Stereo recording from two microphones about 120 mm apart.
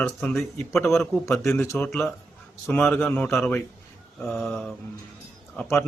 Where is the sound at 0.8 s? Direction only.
20° left (ahead or behind).